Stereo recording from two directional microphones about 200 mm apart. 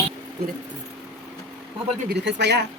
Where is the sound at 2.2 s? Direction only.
55° right (ahead or behind).